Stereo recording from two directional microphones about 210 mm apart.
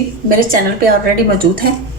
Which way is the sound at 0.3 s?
40° right (ahead or behind).